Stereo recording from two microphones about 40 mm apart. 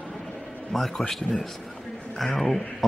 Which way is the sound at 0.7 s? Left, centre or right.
Centre.